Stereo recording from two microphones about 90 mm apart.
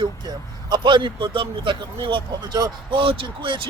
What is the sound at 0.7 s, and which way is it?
Speech, 65° right (ahead or behind).